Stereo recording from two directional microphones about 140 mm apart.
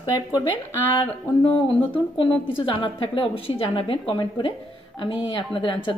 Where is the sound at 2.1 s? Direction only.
35° left (ahead or behind).